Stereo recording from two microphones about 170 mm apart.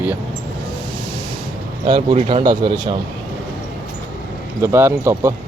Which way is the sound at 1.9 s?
25° right (ahead or behind).